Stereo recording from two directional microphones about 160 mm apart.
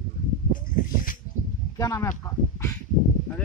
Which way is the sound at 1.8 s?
20° left (ahead or behind).